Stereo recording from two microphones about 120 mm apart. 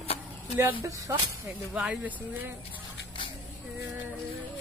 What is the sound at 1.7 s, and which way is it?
Speech, 10° right (ahead or behind).